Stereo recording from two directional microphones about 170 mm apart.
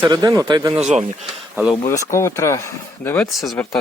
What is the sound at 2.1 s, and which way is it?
Speech, 15° left (ahead or behind).